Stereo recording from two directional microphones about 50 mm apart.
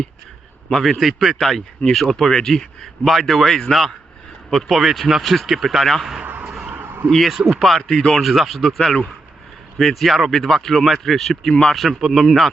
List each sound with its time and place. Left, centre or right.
0.7 s speech: centre
5.8 s speech: centre
6.4 s a sound: centre
6.8 s a sound: right
7.3 s speech: centre
7.6 s speech: centre
8.2 s speech: centre